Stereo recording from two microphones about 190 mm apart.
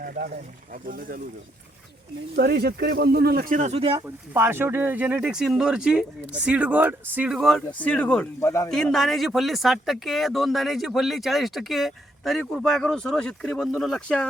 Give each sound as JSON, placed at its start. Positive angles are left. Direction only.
{"t": 0.0, "sound": "speech", "side_deg": -50}
{"t": 2.3, "sound": "speech", "side_deg": -60}
{"t": 3.9, "sound": "speech", "side_deg": -10}
{"t": 8.7, "sound": "speech", "side_deg": 0}